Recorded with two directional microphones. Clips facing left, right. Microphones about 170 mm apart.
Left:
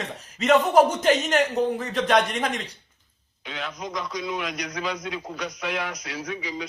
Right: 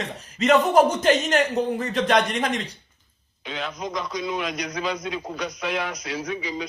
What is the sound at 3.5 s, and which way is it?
Speech, 25° right (ahead or behind).